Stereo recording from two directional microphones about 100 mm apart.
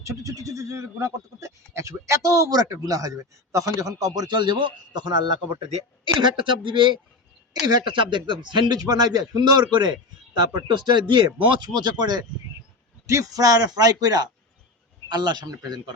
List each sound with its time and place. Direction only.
0.0 s speech: 35° right (ahead or behind)